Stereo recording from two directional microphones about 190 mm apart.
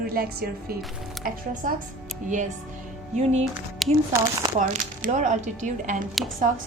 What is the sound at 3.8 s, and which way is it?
Speech, centre (ahead or behind).